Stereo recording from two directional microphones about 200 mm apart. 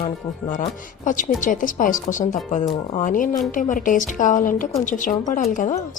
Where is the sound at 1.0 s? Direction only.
40° left (ahead or behind).